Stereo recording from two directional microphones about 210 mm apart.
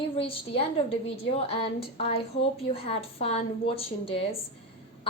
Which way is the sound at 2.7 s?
30° left (ahead or behind).